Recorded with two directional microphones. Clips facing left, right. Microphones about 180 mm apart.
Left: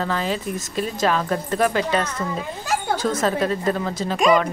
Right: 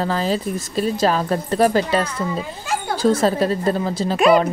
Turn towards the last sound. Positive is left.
turn(degrees=-5)  # may be behind; listen again after turning